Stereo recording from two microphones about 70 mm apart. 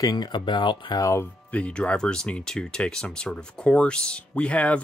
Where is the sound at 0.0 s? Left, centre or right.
Left.